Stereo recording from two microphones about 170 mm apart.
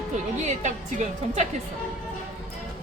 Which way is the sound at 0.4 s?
45° right (ahead or behind).